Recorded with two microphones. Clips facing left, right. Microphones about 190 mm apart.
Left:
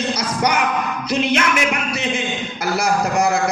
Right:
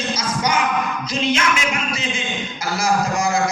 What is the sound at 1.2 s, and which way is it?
A man's voice, 60° left (ahead or behind).